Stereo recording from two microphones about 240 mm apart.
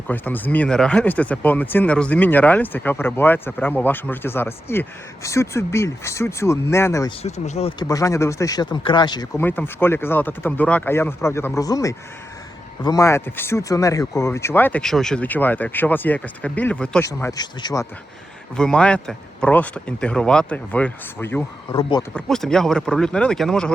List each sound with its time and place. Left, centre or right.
0.1 s speech: centre
7.2 s speech: left
7.8 s speech: centre
18.5 s speech: centre
22.1 s speech: centre